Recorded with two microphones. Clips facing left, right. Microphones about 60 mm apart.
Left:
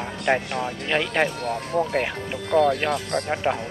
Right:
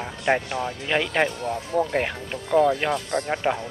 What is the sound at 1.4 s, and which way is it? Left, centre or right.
Speech, left.